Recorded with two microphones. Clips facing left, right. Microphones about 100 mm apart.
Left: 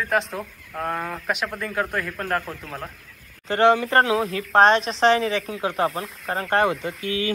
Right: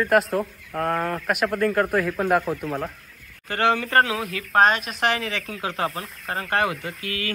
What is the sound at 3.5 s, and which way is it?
Speech, 20° left (ahead or behind).